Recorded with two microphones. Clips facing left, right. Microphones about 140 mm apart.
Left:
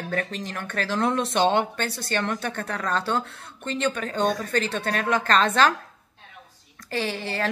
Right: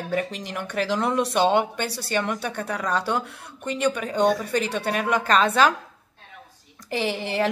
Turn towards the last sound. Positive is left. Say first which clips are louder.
# right 3 dB
turn(degrees=-15)  # may be behind; listen again after turning